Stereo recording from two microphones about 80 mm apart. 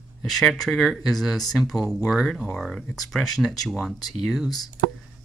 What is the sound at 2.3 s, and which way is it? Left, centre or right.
Speech, centre.